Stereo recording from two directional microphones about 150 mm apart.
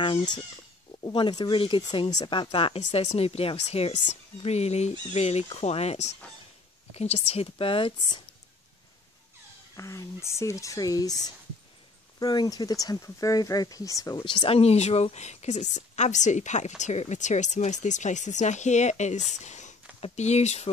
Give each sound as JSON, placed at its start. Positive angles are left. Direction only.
{"t": 0.0, "sound": "speech", "side_deg": 30}
{"t": 9.8, "sound": "speech", "side_deg": 20}